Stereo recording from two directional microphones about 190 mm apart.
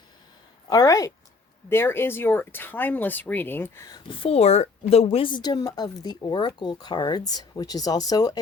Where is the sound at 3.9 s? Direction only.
25° left (ahead or behind).